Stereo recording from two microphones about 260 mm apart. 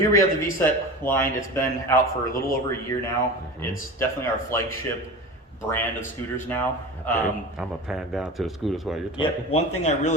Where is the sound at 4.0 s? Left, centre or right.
Centre.